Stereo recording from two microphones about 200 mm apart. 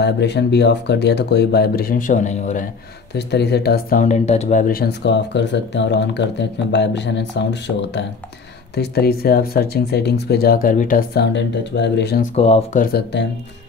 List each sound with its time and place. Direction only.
0.0 s speech: 55° left (ahead or behind); by 2.6 s 35° left (ahead or behind)
3.2 s speech: 55° left (ahead or behind)
4.0 s speech: 35° left (ahead or behind); by 12.3 s 55° left (ahead or behind)
12.4 s speech: 30° left (ahead or behind)
12.8 s speech: 55° left (ahead or behind)